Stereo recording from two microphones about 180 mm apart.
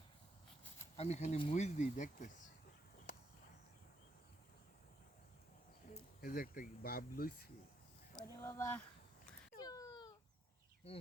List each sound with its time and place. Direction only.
0.9 s speech: 40° left (ahead or behind)
3.1 s a sound: 45° left (ahead or behind)
5.9 s speech: 50° left (ahead or behind)
8.4 s speech: 15° left (ahead or behind)
9.6 s a sound: 20° left (ahead or behind)
10.9 s speech: 30° left (ahead or behind)